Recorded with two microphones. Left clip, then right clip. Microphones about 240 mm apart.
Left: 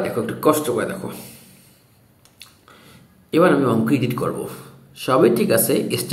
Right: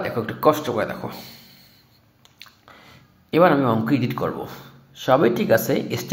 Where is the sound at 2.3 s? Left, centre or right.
Right.